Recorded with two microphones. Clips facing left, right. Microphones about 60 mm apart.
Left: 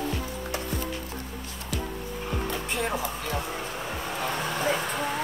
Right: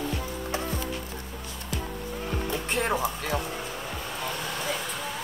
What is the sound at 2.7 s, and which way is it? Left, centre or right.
Music, right.